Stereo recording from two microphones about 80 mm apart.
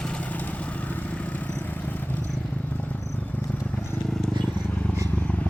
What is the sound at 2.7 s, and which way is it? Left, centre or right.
Cricket, centre.